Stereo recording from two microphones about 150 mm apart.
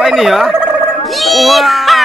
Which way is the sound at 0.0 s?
Centre (ahead or behind).